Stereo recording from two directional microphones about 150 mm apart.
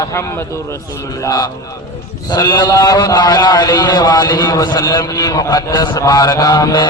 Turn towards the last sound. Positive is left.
turn(degrees=25)  # may be behind; listen again after turning